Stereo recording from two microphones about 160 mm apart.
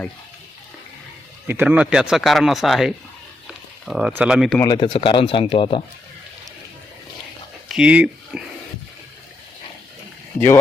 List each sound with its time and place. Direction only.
1.5 s speech: 10° right (ahead or behind)
4.6 s speech: 30° left (ahead or behind)
7.7 s speech: 5° right (ahead or behind)